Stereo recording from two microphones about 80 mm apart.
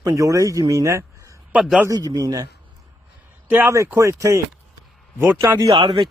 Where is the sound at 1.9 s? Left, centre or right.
Right.